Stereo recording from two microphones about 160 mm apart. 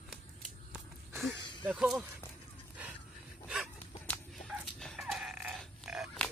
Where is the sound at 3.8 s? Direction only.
10° left (ahead or behind).